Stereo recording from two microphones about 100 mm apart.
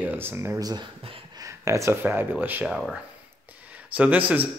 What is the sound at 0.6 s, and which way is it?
Speech, 40° right (ahead or behind).